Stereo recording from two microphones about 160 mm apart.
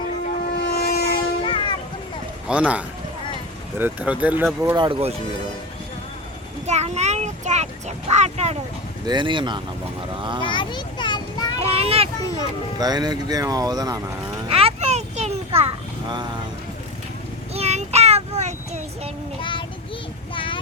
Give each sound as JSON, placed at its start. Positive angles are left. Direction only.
{"t": 0.4, "sound": "a sound", "side_deg": 85}
{"t": 1.1, "sound": "vehicle", "side_deg": 30}
{"t": 2.5, "sound": "speech", "side_deg": -5}
{"t": 4.8, "sound": "speech", "side_deg": -35}
{"t": 6.7, "sound": "a sound", "side_deg": -45}
{"t": 9.0, "sound": "speech", "side_deg": -30}
{"t": 10.4, "sound": "children playing", "side_deg": 30}
{"t": 11.6, "sound": "children playing", "side_deg": -40}
{"t": 12.8, "sound": "speech", "side_deg": -25}
{"t": 14.4, "sound": "children playing", "side_deg": -35}
{"t": 17.5, "sound": "child singing", "side_deg": -40}
{"t": 19.4, "sound": "child singing", "side_deg": 30}
{"t": 20.3, "sound": "a sound", "side_deg": 30}